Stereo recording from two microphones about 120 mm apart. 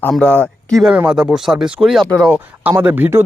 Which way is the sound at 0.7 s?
5° right (ahead or behind).